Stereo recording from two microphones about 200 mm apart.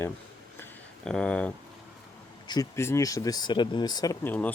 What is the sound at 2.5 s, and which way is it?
Speech, 15° left (ahead or behind).